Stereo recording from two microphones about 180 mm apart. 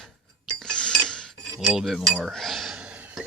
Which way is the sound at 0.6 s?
5° left (ahead or behind).